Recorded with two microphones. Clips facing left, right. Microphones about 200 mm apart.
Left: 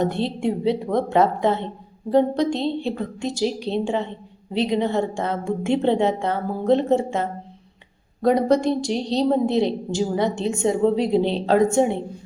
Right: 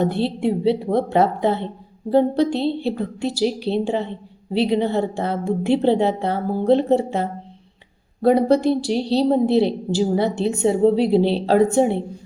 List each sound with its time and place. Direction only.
0.0 s a woman's voice: 5° right (ahead or behind)
0.6 s a woman's voice: 30° right (ahead or behind)
3.3 s a woman's voice: 5° right (ahead or behind)
3.7 s a woman's voice: 35° right (ahead or behind)
9.5 s a woman's voice: 5° right (ahead or behind)
10.1 s a woman's voice: 35° right (ahead or behind)
10.9 s a woman's voice: 5° right (ahead or behind)
11.4 s a woman's voice: 35° right (ahead or behind)